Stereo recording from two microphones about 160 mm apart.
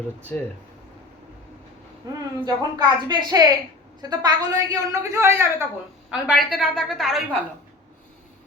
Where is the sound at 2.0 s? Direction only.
25° right (ahead or behind).